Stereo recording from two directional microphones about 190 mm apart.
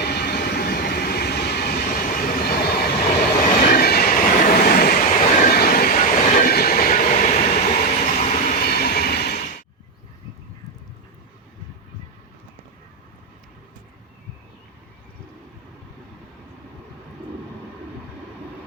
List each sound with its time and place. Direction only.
0.0 s train: 55° left (ahead or behind)
3.4 s train: 45° left (ahead or behind)
8.6 s train: 55° left (ahead or behind)